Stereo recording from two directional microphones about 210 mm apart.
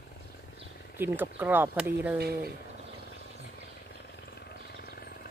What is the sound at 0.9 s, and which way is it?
Speech, 10° right (ahead or behind).